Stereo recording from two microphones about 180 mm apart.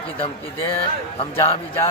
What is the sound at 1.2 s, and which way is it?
Speech, 30° left (ahead or behind).